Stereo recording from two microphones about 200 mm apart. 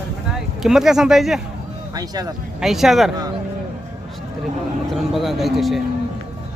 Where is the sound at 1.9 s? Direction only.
20° right (ahead or behind).